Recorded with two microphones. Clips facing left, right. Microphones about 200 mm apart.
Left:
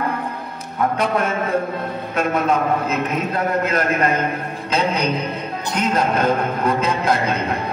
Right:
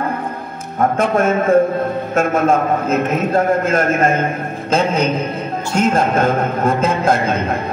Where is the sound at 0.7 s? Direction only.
45° right (ahead or behind).